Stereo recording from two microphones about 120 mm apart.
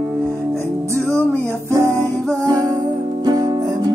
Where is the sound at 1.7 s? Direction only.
25° right (ahead or behind).